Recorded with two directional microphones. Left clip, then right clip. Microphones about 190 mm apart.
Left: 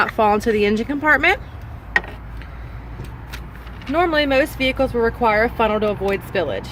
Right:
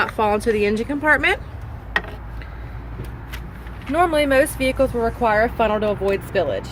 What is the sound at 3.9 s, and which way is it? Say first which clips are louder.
Speech: even; 35° left (ahead or behind).